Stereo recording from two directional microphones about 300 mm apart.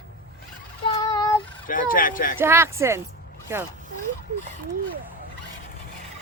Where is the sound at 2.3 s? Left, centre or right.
Centre.